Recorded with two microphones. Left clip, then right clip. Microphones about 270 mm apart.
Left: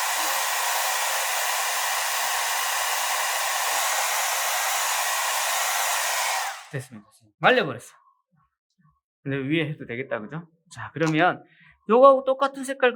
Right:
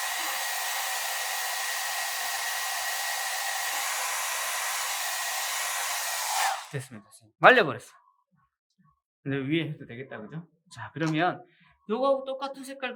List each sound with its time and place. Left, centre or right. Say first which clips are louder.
0.1 s hair dryer: left 6 dB; centre
6.7 s speech: left 3 dB; centre
9.2 s speech: left 4 dB; centre
11.9 s speech: left 11 dB; centre